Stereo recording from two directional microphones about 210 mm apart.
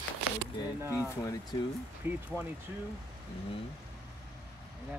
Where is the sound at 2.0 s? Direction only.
10° right (ahead or behind).